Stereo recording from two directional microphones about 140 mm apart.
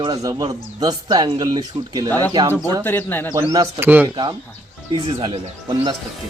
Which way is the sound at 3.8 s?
10° right (ahead or behind).